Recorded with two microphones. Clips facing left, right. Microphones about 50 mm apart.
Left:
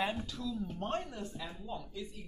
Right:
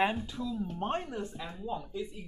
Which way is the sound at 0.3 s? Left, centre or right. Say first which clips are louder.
Right 3 dB; right.